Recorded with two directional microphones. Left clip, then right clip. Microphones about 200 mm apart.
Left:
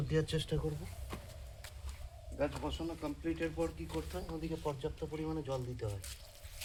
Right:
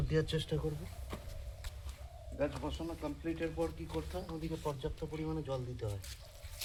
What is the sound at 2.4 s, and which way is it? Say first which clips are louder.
Speech: even; 15° left (ahead or behind).